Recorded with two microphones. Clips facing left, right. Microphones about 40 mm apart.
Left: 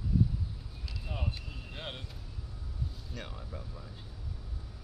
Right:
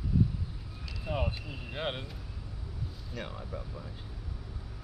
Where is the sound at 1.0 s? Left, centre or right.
Right.